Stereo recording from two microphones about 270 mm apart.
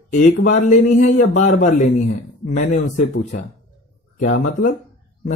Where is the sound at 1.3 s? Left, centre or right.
Left.